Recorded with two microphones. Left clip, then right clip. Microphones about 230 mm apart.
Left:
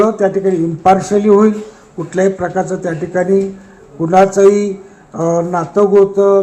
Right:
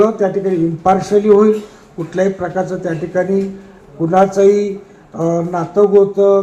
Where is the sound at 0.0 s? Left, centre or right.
Left.